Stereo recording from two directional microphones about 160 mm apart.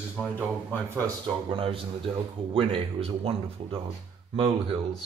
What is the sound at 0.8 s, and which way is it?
Speech, 20° right (ahead or behind).